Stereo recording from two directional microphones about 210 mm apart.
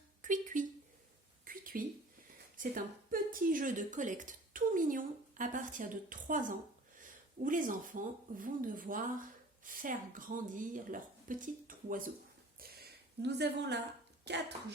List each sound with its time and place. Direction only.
0.2 s a sound: 40° right (ahead or behind)
2.6 s a woman's voice: 40° right (ahead or behind)
13.2 s a woman's voice: 55° right (ahead or behind)